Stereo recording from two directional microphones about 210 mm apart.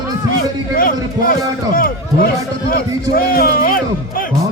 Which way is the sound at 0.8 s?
45° left (ahead or behind).